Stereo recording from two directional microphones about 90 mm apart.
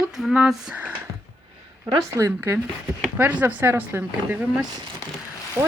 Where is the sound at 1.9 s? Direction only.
35° right (ahead or behind).